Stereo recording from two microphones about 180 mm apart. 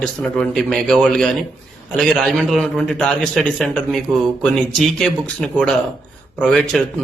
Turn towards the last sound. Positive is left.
turn(degrees=0)  # may be behind; listen again after turning